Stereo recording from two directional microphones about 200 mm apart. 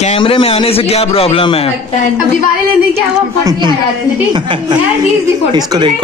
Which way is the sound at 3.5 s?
25° right (ahead or behind).